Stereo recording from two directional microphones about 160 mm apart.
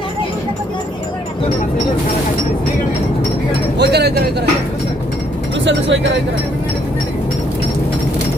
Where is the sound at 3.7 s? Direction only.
90° right.